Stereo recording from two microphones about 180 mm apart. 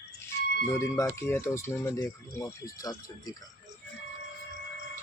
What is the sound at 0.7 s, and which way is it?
Speech, 15° left (ahead or behind).